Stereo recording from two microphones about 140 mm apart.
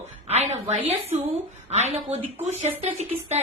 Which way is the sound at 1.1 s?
55° right (ahead or behind).